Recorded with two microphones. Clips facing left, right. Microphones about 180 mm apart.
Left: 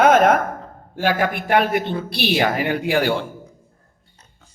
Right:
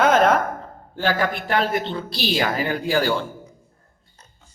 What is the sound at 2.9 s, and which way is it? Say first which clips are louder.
Speech: left 1 dB; 60° left (ahead or behind).